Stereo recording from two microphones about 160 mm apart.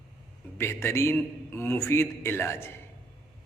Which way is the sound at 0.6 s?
15° left (ahead or behind).